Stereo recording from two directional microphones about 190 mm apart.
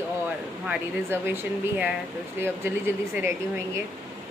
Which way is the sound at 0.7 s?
10° right (ahead or behind).